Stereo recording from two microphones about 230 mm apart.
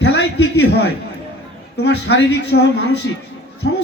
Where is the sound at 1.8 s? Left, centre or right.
Left.